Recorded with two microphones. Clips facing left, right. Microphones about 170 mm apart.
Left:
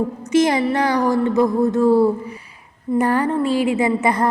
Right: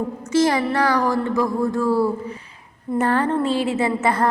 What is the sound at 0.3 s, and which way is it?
A woman's voice, 20° left (ahead or behind).